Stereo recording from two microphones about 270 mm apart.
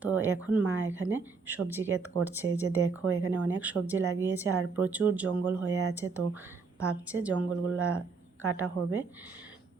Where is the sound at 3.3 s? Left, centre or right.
Centre.